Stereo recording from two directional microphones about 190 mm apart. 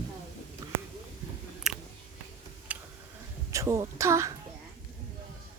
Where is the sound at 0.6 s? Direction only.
20° right (ahead or behind).